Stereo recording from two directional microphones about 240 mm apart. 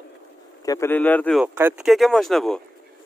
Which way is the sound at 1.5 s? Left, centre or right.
Centre.